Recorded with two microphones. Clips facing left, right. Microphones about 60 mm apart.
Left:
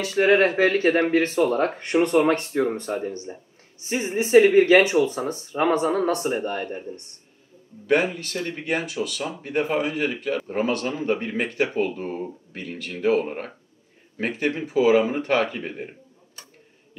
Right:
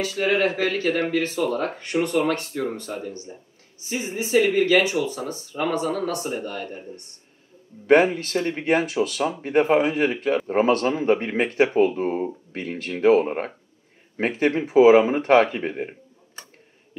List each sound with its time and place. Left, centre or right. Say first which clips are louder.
0.0 s speech: left 3 dB; left
7.8 s speech: right 5 dB; right